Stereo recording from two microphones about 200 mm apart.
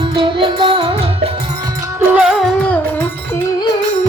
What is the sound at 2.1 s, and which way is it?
Music, 5° right (ahead or behind).